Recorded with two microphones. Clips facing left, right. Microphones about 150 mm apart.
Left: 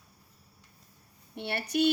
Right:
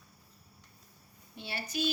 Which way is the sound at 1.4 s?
65° left (ahead or behind).